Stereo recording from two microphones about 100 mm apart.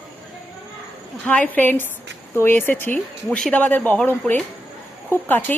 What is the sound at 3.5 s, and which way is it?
Speech, 15° left (ahead or behind).